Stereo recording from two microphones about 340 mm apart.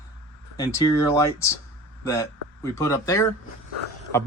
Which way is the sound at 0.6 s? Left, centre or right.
Centre.